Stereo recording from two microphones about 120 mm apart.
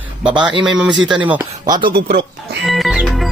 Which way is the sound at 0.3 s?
40° right (ahead or behind).